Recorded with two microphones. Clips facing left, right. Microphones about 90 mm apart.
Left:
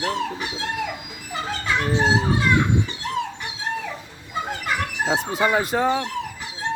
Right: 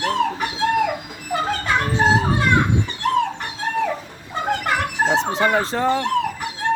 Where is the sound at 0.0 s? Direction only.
55° right (ahead or behind).